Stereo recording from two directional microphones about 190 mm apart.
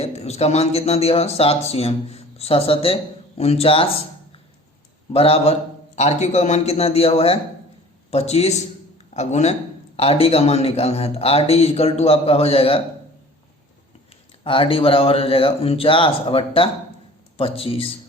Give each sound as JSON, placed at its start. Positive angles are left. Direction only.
{"t": 0.0, "sound": "speech", "side_deg": 35}
{"t": 5.1, "sound": "speech", "side_deg": 30}
{"t": 14.4, "sound": "speech", "side_deg": 30}